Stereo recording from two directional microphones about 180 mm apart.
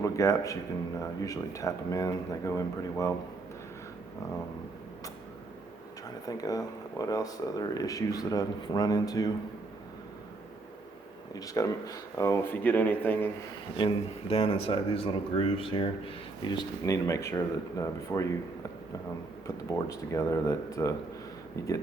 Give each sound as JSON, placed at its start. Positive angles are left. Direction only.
{"t": 0.0, "sound": "a man's voice", "side_deg": 15}
{"t": 6.2, "sound": "speech", "side_deg": 20}
{"t": 11.3, "sound": "speech", "side_deg": 20}
{"t": 13.7, "sound": "speech", "side_deg": 30}
{"t": 16.8, "sound": "speech", "side_deg": 15}
{"t": 19.6, "sound": "speech", "side_deg": 15}